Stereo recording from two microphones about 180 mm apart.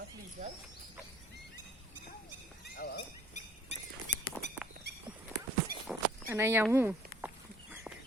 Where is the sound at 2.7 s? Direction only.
60° left (ahead or behind).